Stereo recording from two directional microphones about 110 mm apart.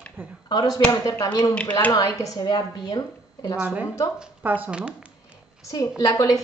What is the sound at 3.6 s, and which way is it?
Speech, 10° right (ahead or behind).